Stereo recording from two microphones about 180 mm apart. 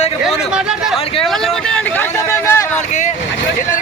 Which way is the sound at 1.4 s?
10° left (ahead or behind).